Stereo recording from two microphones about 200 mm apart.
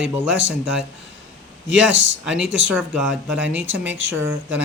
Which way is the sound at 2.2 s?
5° right (ahead or behind).